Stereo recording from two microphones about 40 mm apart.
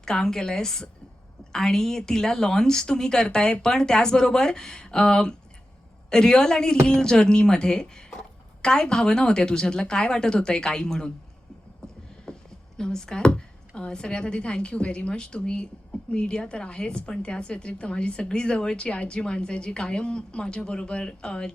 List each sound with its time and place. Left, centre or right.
0.0 s a woman's voice: centre
12.3 s a sound: centre
12.7 s speech: centre